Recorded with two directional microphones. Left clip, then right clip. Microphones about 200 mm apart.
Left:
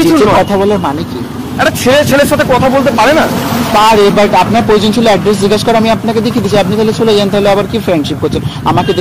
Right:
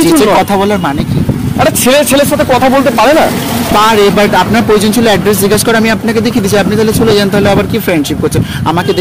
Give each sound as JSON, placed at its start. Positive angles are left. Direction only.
{"t": 2.7, "sound": "speech", "side_deg": -45}